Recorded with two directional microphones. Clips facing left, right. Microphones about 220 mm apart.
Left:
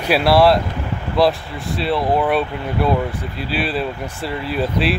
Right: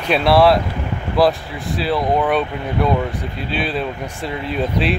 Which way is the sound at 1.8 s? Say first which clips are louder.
Even; centre (ahead or behind).